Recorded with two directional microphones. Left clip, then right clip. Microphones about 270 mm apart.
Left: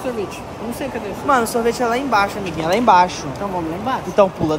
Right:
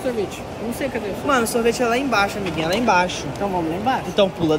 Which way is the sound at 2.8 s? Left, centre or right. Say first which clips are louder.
Left 6 dB; centre.